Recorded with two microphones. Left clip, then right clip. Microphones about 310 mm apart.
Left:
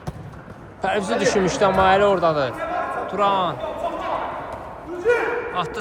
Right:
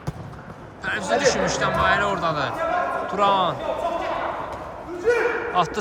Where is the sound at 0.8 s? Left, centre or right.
Centre.